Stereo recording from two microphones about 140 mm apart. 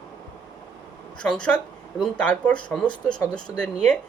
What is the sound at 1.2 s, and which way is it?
Speech, 5° left (ahead or behind).